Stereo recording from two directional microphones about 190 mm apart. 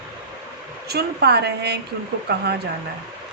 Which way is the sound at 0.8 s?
60° right (ahead or behind).